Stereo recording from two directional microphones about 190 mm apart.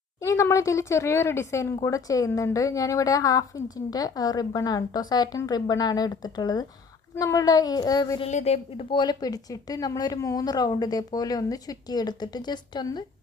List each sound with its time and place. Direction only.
0.2 s a woman's voice: 15° left (ahead or behind)
8.2 s a woman's voice: 35° left (ahead or behind)